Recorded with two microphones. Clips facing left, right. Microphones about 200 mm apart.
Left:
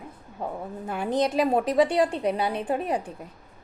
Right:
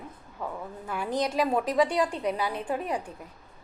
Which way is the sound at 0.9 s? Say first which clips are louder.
Left 4 dB; 25° left (ahead or behind).